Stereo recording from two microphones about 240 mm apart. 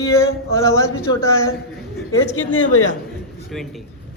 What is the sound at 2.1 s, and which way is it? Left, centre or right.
Speech, left.